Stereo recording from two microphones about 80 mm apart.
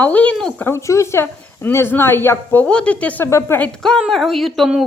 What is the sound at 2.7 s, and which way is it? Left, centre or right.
Speech, centre.